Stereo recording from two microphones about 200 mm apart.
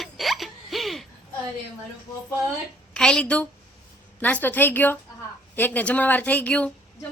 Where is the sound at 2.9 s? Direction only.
5° left (ahead or behind).